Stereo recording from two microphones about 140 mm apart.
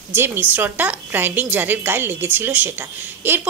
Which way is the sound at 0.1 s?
15° right (ahead or behind).